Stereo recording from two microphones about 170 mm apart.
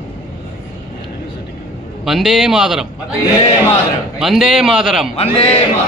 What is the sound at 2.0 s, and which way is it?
Speech, centre (ahead or behind).